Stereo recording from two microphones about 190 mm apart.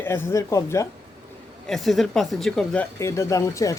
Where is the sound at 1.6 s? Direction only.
Centre (ahead or behind).